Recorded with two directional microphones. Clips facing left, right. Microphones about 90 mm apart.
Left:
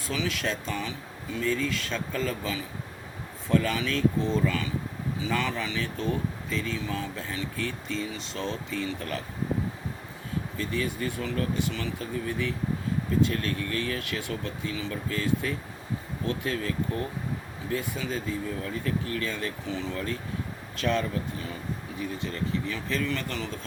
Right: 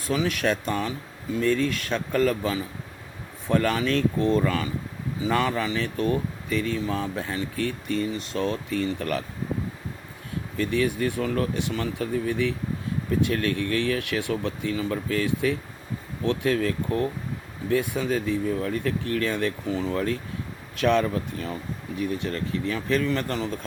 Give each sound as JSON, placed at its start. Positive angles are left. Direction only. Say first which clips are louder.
{"t": 0.0, "sound": "speech", "louder": "right 6 dB", "side_deg": -50}
{"t": 6.8, "sound": "speech", "louder": "right 5 dB", "side_deg": -50}
{"t": 10.6, "sound": "speech", "louder": "right 7 dB", "side_deg": -65}
{"t": 12.3, "sound": "speech", "louder": "right 4 dB", "side_deg": -65}
{"t": 19.6, "sound": "speech", "louder": "right 6 dB", "side_deg": -45}
{"t": 20.8, "sound": "speech", "louder": "right 6 dB", "side_deg": -65}
{"t": 21.1, "sound": "speech", "louder": "right 3 dB", "side_deg": -55}
{"t": 22.0, "sound": "speech", "louder": "right 4 dB", "side_deg": -65}
{"t": 23.0, "sound": "speech", "louder": "right 5 dB", "side_deg": -40}